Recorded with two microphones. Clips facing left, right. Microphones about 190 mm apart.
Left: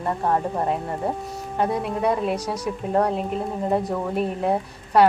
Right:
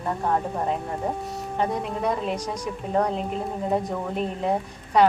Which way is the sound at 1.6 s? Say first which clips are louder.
Left 3 dB; 5° left (ahead or behind).